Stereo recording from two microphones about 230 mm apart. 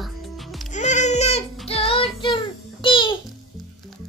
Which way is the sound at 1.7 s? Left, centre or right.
Left.